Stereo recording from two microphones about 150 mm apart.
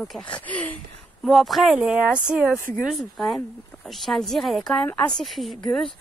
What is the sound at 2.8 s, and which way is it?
A woman's voice, centre (ahead or behind).